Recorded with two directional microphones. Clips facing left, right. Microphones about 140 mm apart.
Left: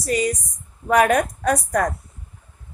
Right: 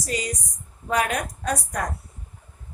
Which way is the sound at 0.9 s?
60° left (ahead or behind).